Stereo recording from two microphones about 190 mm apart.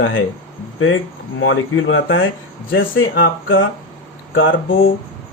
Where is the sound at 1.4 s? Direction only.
90° left.